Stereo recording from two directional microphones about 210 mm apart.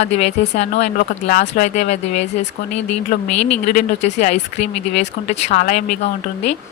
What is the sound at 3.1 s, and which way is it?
Speech, 35° left (ahead or behind).